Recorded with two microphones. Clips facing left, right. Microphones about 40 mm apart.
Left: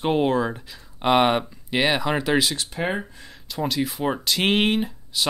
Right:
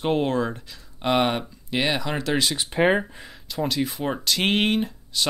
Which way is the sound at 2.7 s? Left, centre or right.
Right.